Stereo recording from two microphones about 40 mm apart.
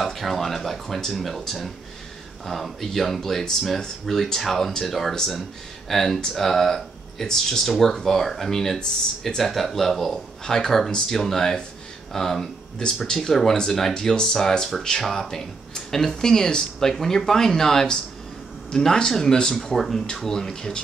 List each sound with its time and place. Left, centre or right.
0.0 s speech: centre